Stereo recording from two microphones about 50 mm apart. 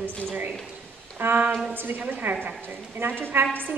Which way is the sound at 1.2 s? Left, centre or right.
Right.